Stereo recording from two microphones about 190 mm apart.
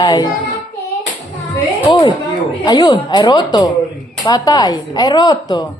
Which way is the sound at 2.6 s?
20° left (ahead or behind).